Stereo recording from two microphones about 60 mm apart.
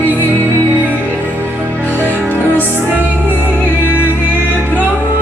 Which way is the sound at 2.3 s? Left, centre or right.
Left.